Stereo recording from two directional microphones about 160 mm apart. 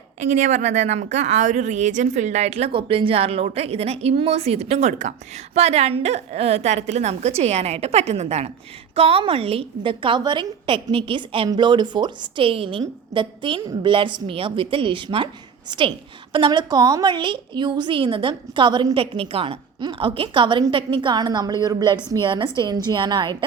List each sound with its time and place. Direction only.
0.2 s a woman's voice: 50° right (ahead or behind); by 15.3 s 30° right (ahead or behind)
16.3 s a woman's voice: 30° right (ahead or behind)